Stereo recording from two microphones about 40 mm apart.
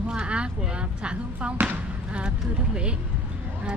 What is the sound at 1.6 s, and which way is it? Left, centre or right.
Speech, right.